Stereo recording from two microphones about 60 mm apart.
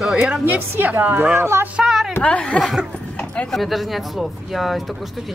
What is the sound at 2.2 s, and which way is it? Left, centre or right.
Speech, left.